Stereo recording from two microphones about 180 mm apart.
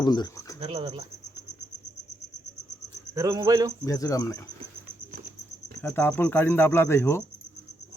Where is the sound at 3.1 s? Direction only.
20° right (ahead or behind).